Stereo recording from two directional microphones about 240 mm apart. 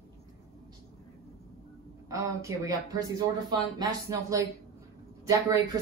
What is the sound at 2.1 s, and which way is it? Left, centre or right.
Speech, centre.